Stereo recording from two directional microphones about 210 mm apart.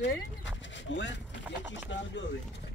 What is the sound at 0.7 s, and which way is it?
Speech, 60° left (ahead or behind).